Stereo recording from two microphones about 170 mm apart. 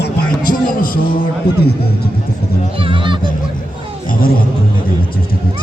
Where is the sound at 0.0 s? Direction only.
55° left (ahead or behind).